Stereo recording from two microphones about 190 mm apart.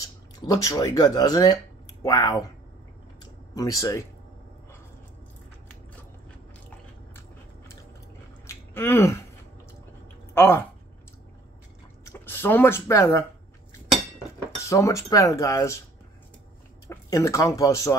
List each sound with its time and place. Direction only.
0.0 s speech: 20° left (ahead or behind)
3.5 s speech: 20° left (ahead or behind)
8.5 s a sound: 15° left (ahead or behind)
10.3 s speech: 10° left (ahead or behind)
12.0 s speech: 10° left (ahead or behind)
14.6 s speech: 15° left (ahead or behind)
16.8 s speech: 15° left (ahead or behind)